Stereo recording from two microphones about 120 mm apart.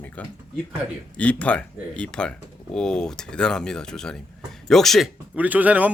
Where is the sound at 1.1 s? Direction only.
10° left (ahead or behind).